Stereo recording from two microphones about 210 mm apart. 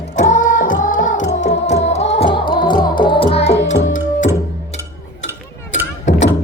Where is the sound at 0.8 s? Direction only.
40° left (ahead or behind).